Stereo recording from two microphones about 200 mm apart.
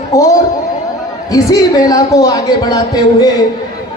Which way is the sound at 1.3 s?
15° left (ahead or behind).